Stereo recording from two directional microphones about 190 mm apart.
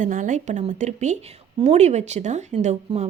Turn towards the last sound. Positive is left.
turn(degrees=-35)  # may be behind; listen again after turning